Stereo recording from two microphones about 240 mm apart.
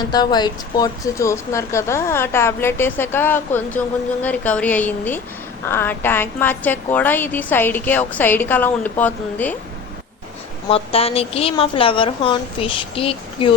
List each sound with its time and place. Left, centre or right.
0.1 s speech: centre
10.7 s a woman's voice: left